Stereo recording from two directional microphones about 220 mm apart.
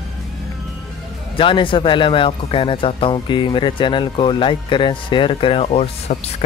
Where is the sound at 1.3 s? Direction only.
25° left (ahead or behind).